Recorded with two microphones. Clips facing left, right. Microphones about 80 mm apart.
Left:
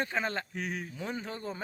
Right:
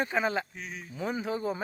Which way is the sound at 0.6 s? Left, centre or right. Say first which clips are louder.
Left 5 dB; left.